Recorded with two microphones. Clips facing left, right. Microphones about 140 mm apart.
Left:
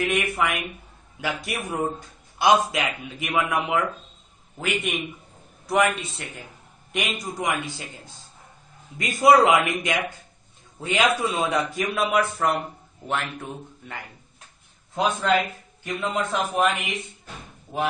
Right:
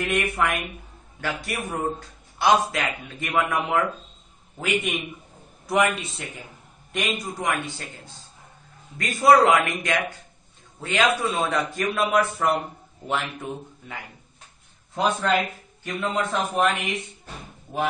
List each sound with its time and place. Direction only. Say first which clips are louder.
0.0 s a man's voice: even; 5° left (ahead or behind)
3.3 s a man's voice: even; centre (ahead or behind)
8.9 s a man's voice: even; 15° left (ahead or behind); by 13.9 s 5° right (ahead or behind)
15.0 s a man's voice: even; 5° left (ahead or behind)